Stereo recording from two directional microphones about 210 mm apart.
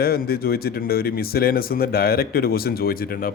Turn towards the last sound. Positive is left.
turn(degrees=45)  # may be behind; listen again after turning